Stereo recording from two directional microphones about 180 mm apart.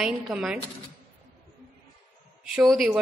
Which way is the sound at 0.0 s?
5° right (ahead or behind).